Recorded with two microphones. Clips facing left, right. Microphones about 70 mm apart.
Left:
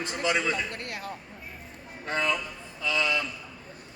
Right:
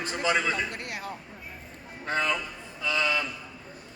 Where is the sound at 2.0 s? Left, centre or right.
Right.